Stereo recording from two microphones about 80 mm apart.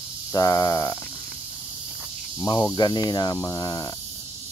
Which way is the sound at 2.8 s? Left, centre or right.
Left.